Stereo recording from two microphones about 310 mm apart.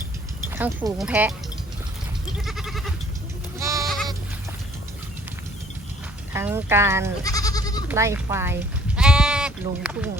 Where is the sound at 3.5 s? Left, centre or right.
Centre.